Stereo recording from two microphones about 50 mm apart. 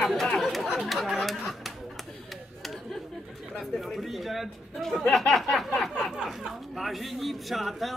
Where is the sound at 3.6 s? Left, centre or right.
Centre.